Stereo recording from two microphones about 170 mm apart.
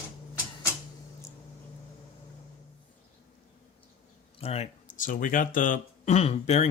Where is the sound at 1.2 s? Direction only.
20° left (ahead or behind).